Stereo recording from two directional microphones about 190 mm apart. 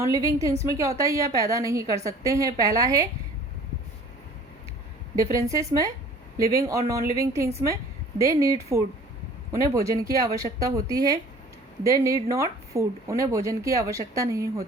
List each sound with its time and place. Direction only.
0.0 s a woman's voice: 15° right (ahead or behind)
5.2 s a woman's voice: 15° right (ahead or behind)